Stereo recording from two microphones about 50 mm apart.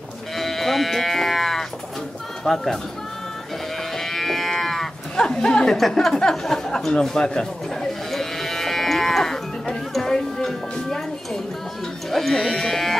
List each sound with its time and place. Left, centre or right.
0.4 s sheep: centre
2.4 s speech: centre
3.9 s music: centre
5.1 s speech: centre
5.8 s a sound: centre
12.1 s speech: centre